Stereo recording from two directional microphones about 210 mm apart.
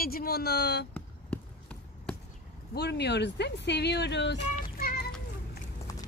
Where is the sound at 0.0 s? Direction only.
45° left (ahead or behind).